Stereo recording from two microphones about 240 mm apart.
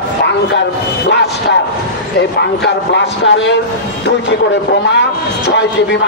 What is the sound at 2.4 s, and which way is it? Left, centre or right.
A man's voice, left.